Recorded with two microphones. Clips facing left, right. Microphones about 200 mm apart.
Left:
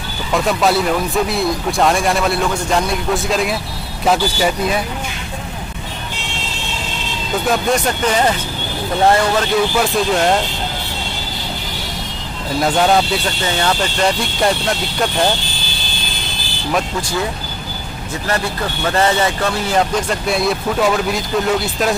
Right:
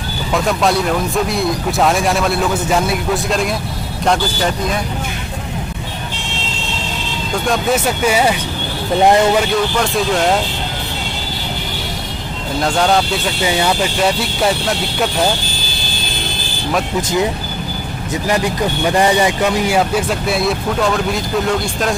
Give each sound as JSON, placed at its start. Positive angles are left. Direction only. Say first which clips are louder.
{"t": 0.3, "sound": "speech", "louder": "even", "side_deg": 0}
{"t": 7.4, "sound": "speech", "louder": "right 1 dB", "side_deg": 0}
{"t": 9.6, "sound": "speech", "louder": "left 1 dB", "side_deg": 5}
{"t": 12.6, "sound": "speech", "louder": "left 1 dB", "side_deg": 5}
{"t": 13.4, "sound": "speech", "louder": "right 5 dB", "side_deg": -10}
{"t": 18.2, "sound": "speech", "louder": "right 4 dB", "side_deg": -15}